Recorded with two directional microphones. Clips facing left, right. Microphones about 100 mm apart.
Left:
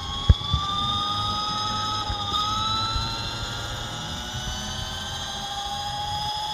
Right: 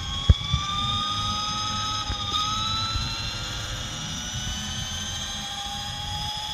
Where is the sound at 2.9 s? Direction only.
15° left (ahead or behind).